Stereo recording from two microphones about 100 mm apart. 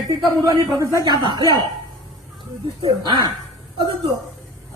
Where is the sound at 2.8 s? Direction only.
55° right (ahead or behind).